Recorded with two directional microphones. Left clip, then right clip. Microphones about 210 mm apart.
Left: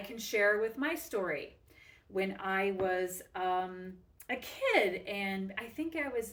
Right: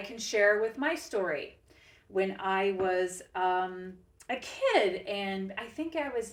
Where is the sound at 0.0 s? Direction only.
20° left (ahead or behind).